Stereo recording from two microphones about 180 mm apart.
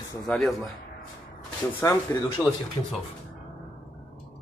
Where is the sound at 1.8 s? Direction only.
15° left (ahead or behind).